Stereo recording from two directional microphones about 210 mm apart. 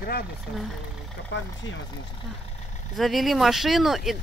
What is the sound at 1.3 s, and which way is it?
Speech, 60° left (ahead or behind).